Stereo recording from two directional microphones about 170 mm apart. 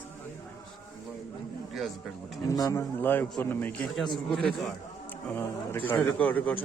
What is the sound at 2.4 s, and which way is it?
Speech, 20° left (ahead or behind).